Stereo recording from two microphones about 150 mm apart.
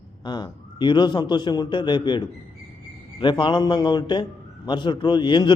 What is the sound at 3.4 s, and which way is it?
A man's voice, 30° left (ahead or behind).